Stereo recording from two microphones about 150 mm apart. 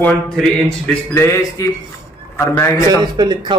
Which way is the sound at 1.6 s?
25° left (ahead or behind).